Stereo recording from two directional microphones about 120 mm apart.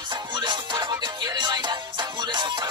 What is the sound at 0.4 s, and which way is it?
Music, 40° right (ahead or behind).